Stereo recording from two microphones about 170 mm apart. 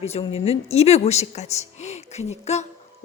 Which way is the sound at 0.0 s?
35° left (ahead or behind).